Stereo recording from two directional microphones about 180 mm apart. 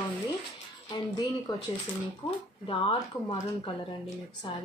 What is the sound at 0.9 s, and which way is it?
Speech, 20° left (ahead or behind).